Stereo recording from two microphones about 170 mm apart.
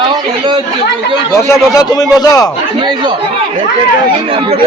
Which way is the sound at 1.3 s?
20° left (ahead or behind).